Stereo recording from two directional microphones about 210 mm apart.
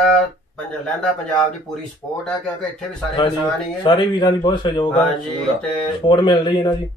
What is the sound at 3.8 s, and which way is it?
A man's voice, 20° left (ahead or behind).